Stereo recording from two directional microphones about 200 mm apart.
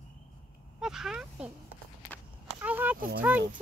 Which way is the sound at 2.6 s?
10° right (ahead or behind).